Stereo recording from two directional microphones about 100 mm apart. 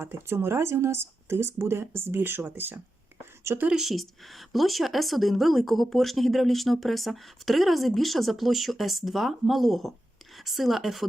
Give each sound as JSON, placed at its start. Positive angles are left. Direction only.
{"t": 0.0, "sound": "a woman's voice", "side_deg": -25}
{"t": 3.7, "sound": "a woman's voice", "side_deg": -5}